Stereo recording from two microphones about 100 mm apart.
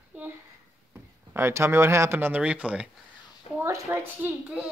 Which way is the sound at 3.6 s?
25° right (ahead or behind).